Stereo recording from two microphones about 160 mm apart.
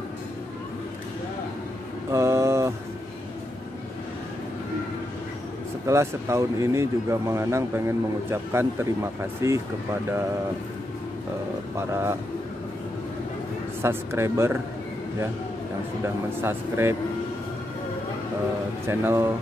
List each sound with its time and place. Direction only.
2.1 s mantra: 15° right (ahead or behind)
5.9 s speech: 15° right (ahead or behind)
11.7 s speech: 15° right (ahead or behind)
13.8 s speech: 15° right (ahead or behind)
16.3 s speech: 15° right (ahead or behind)
18.9 s speech: 15° right (ahead or behind)